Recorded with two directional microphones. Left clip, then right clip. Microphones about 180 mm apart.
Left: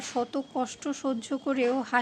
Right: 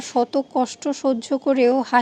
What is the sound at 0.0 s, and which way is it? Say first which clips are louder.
A woman's voice: right 10 dB; 25° right (ahead or behind).